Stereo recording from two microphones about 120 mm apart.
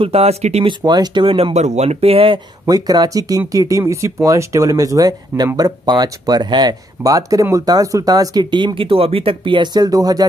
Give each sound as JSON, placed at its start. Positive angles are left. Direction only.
{"t": 0.0, "sound": "speech", "side_deg": -60}
{"t": 0.7, "sound": "speech", "side_deg": -35}
{"t": 2.6, "sound": "speech", "side_deg": -30}